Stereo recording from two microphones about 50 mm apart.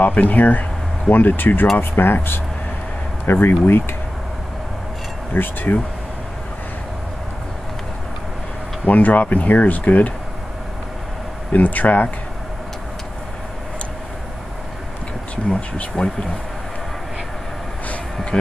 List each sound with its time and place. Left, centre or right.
0.0 s speech: left
5.3 s speech: left
8.8 s speech: left
11.5 s speech: left
16.0 s speech: centre
18.3 s speech: centre